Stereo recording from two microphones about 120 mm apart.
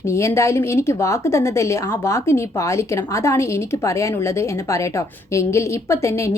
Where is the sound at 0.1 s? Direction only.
25° left (ahead or behind).